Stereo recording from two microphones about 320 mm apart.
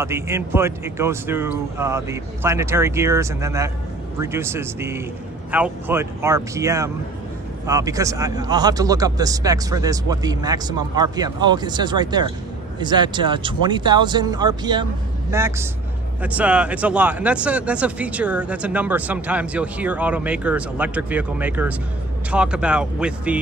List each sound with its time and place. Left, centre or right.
0.0 s a man's voice: centre